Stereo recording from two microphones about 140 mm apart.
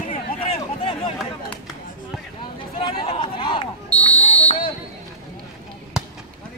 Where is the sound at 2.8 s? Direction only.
40° left (ahead or behind).